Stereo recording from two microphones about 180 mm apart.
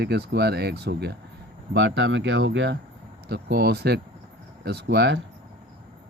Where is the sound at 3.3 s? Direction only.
65° right (ahead or behind).